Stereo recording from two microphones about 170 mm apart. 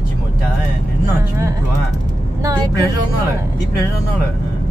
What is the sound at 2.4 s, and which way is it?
Speech, 20° right (ahead or behind).